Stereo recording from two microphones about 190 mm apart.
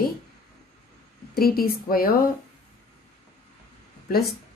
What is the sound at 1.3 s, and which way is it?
Speech, 50° left (ahead or behind).